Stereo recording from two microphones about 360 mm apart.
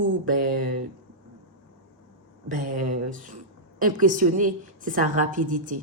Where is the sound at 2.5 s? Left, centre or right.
Right.